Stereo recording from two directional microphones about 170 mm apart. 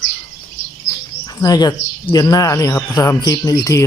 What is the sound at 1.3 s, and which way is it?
Speech, 20° left (ahead or behind).